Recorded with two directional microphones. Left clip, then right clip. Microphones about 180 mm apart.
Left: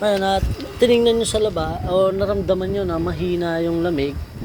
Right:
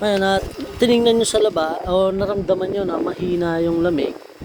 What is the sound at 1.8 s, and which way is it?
Speech, 15° right (ahead or behind).